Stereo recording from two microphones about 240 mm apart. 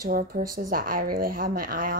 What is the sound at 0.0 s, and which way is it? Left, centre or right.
A woman's voice, right.